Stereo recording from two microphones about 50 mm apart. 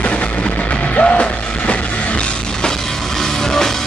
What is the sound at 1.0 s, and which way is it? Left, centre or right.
Music, left.